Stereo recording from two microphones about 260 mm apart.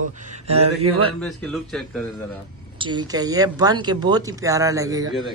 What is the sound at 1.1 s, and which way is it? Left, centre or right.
Speech, centre.